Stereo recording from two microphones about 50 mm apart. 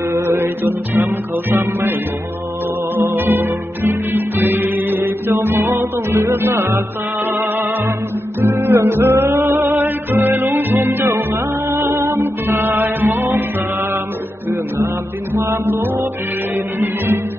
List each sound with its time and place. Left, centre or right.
0.1 s music: right
0.7 s music: right
3.2 s music: right
7.2 s music: right
9.8 s music: right
15.4 s music: right
15.7 s music: right